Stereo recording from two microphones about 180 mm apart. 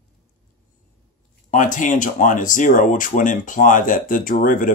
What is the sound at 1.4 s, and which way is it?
Speech, 45° left (ahead or behind).